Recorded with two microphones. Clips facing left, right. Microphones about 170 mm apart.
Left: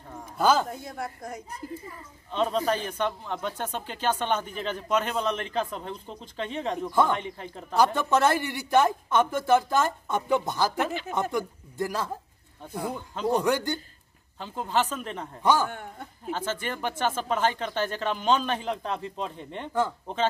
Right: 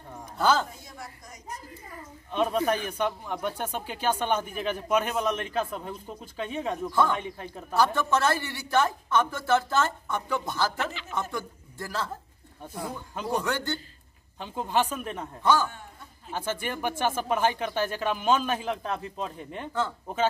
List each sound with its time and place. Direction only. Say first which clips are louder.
0.4 s a woman's voice: left 2 dB; 10° left (ahead or behind)
0.7 s a woman's voice: left 9 dB; 60° left (ahead or behind)
2.3 s speech: even; 10° right (ahead or behind)
6.9 s a woman's voice: left 2 dB; 15° left (ahead or behind)
7.2 s speech: even; 5° right (ahead or behind)
7.7 s a woman's voice: left 2 dB; 15° left (ahead or behind)
14.4 s speech: even; 15° right (ahead or behind)
15.4 s a woman's voice: left 1 dB; 15° left (ahead or behind)
15.7 s speech: left 7 dB; 60° left (ahead or behind)
16.3 s speech: right 2 dB; 10° right (ahead or behind)